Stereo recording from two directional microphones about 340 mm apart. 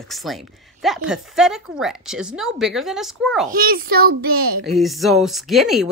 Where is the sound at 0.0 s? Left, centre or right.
Centre.